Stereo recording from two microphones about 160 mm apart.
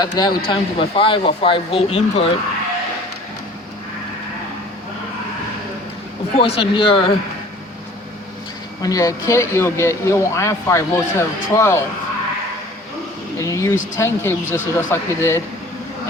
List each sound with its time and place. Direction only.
0.0 s speech: 25° left (ahead or behind)
6.3 s speech: 35° left (ahead or behind)
8.8 s speech: 20° left (ahead or behind)
13.4 s speech: 20° left (ahead or behind)